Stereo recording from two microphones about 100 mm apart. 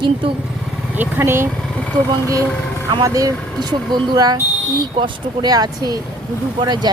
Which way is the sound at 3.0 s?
35° right (ahead or behind).